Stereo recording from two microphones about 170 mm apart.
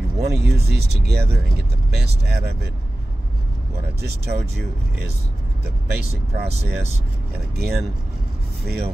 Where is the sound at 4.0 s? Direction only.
70° right (ahead or behind).